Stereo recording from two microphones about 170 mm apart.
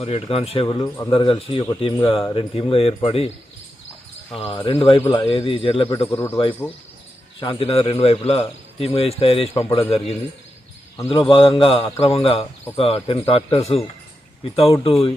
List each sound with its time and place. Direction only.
0.0 s a man's voice: 35° left (ahead or behind)
4.4 s a man's voice: 30° left (ahead or behind)
6.1 s speech: 15° left (ahead or behind)
6.3 s a man's voice: 30° left (ahead or behind)
11.1 s a man's voice: 30° left (ahead or behind)